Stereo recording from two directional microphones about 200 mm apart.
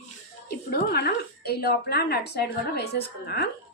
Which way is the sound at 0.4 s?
50° left (ahead or behind).